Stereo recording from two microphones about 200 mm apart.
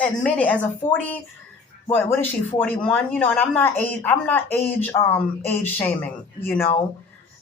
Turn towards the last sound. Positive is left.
turn(degrees=10)  # may be behind; listen again after turning